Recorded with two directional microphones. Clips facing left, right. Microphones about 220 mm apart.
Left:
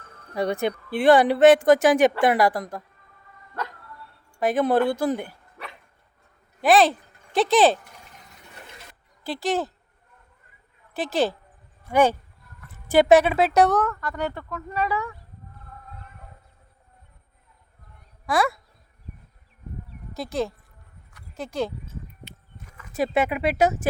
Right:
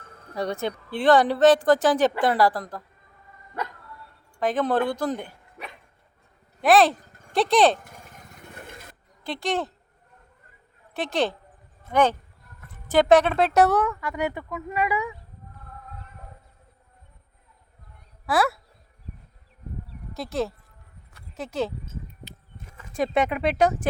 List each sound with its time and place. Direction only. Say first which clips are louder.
0.3 s a woman's voice: left 3 dB; 15° left (ahead or behind)
4.4 s a woman's voice: left 3 dB; 10° left (ahead or behind)
6.6 s speech: even; centre (ahead or behind)
7.9 s lawn mower: right 3 dB; 50° right (ahead or behind)
9.2 s speech: left 2 dB; 5° left (ahead or behind)
10.9 s speech: left 2 dB; centre (ahead or behind); by 15.1 s 15° right (ahead or behind)
18.3 s speech: even; 5° right (ahead or behind)
20.1 s speech: left 1 dB; centre (ahead or behind)
22.9 s speech: even; 5° left (ahead or behind)